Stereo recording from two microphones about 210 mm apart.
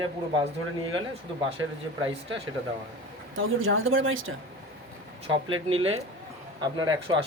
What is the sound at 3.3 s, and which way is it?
Speech, 70° right (ahead or behind).